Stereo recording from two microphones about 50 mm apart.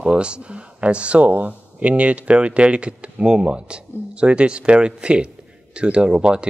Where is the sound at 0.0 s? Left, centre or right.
Right.